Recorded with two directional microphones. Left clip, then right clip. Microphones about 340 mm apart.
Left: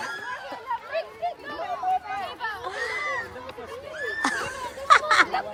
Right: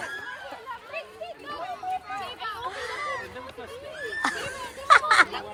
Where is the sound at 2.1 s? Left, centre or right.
Centre.